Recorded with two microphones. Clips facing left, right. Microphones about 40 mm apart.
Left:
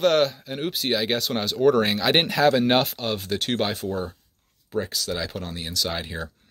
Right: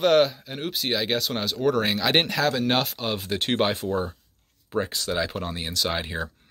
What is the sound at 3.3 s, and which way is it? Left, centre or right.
Speech, centre.